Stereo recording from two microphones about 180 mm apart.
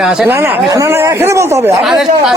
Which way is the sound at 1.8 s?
Centre (ahead or behind).